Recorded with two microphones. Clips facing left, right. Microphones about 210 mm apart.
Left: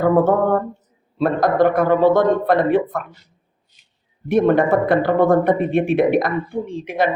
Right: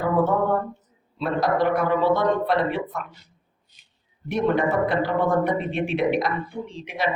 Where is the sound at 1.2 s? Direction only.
50° left (ahead or behind).